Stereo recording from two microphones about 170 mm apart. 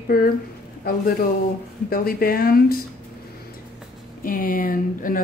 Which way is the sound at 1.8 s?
60° left (ahead or behind).